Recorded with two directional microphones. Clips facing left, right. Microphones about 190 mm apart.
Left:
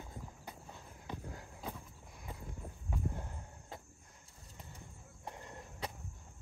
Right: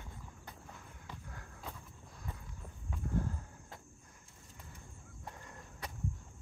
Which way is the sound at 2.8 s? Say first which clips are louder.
Right 5 dB; 20° left (ahead or behind).